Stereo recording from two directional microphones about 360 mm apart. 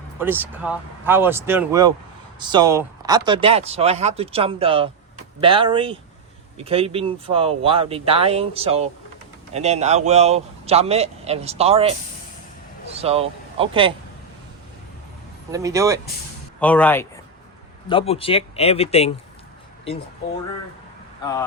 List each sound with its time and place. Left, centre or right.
0.2 s speech: centre
15.5 s speech: centre
16.6 s speech: centre